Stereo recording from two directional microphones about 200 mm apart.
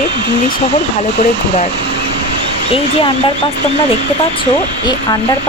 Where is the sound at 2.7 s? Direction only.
30° left (ahead or behind).